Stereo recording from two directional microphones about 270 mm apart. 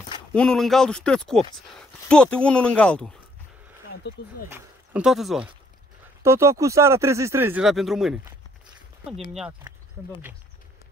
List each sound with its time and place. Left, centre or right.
0.3 s speech: centre
4.1 s speech: left
4.5 s speech: centre